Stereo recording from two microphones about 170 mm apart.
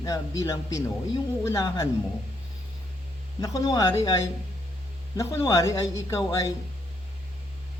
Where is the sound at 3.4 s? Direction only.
20° left (ahead or behind).